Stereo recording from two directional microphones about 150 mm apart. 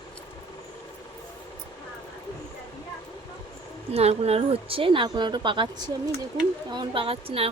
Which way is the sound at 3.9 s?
45° right (ahead or behind).